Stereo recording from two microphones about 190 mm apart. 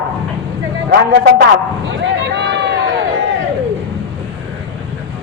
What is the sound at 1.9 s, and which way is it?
Run, 70° right (ahead or behind).